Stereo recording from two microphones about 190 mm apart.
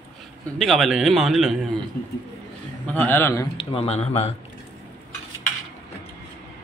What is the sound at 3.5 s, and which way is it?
Speech, 30° left (ahead or behind).